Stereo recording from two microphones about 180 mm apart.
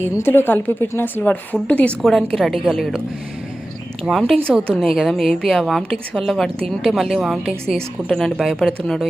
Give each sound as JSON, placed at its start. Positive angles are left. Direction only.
{"t": 0.2, "sound": "a woman's voice", "side_deg": 10}
{"t": 4.0, "sound": "a woman's voice", "side_deg": 0}